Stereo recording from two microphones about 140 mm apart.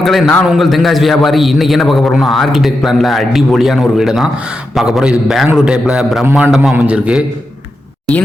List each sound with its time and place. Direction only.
0.0 s a man's voice: centre (ahead or behind)